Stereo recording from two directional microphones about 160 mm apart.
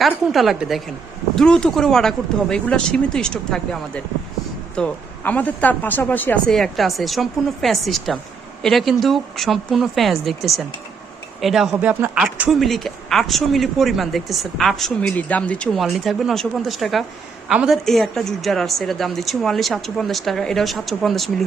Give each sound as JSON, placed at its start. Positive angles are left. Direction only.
{"t": 0.0, "sound": "speech", "side_deg": 0}